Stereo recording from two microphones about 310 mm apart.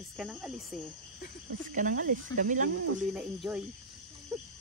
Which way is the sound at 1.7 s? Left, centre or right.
Right.